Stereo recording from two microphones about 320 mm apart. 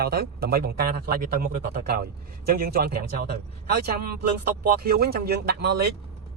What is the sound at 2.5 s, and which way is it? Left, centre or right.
A man's voice, right.